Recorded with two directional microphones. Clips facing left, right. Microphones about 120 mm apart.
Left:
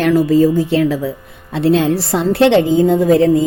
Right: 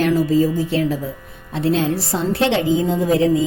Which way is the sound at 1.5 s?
70° left (ahead or behind).